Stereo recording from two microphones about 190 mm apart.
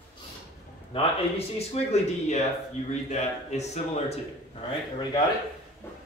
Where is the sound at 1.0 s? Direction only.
35° left (ahead or behind).